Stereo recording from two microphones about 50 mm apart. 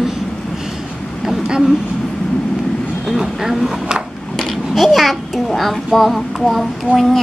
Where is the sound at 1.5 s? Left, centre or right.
Centre.